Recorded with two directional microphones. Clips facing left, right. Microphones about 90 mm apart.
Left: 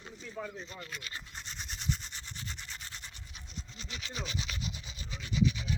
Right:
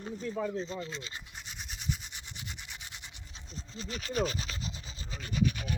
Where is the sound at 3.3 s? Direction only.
35° right (ahead or behind).